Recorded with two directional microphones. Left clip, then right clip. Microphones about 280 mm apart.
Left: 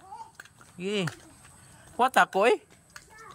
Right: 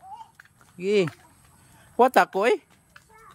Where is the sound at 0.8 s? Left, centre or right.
Right.